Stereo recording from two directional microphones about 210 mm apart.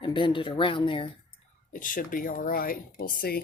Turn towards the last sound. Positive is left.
turn(degrees=45)  # may be behind; listen again after turning